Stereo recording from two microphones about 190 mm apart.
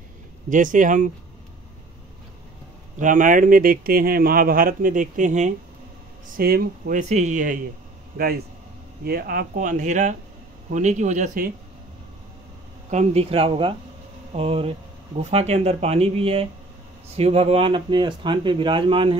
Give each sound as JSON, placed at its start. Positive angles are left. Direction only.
{"t": 0.5, "sound": "speech", "side_deg": -40}
{"t": 3.0, "sound": "speech", "side_deg": -40}
{"t": 9.0, "sound": "speech", "side_deg": -55}
{"t": 12.9, "sound": "speech", "side_deg": -30}